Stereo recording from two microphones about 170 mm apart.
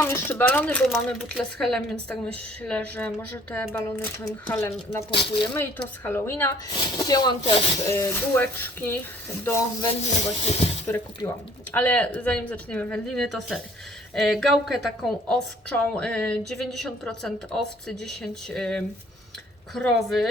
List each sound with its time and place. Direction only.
0.0 s a woman's voice: 15° left (ahead or behind)
6.7 s speech: 25° left (ahead or behind)
9.9 s speech: 40° left (ahead or behind)
10.8 s a woman's voice: 15° left (ahead or behind)